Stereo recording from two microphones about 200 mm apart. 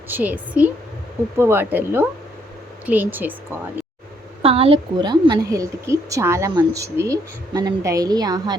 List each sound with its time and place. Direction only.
0.1 s a woman's voice: 10° right (ahead or behind)
4.4 s a woman's voice: 30° right (ahead or behind)